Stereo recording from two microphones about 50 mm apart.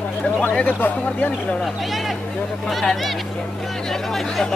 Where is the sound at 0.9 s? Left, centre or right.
Left.